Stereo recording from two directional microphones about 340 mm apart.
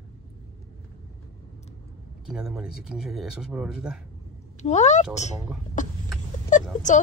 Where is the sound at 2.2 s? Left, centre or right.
Centre.